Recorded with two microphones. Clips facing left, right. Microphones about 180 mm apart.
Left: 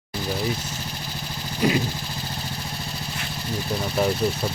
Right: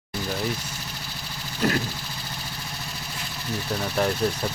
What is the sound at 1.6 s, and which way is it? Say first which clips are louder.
Speech: left 3 dB; 10° left (ahead or behind).